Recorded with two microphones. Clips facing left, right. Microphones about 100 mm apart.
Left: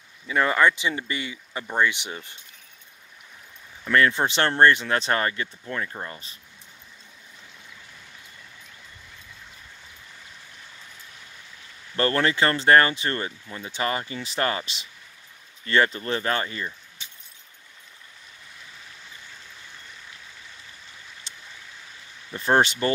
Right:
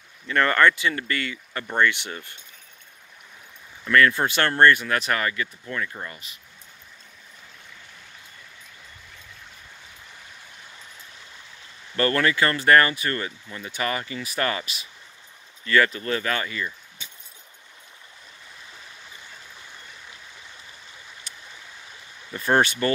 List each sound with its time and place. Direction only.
0.3 s speech: 10° left (ahead or behind)
3.8 s speech: 25° left (ahead or behind)
12.0 s speech: 25° left (ahead or behind)
21.3 s stream: 25° left (ahead or behind)
22.3 s speech: 20° left (ahead or behind)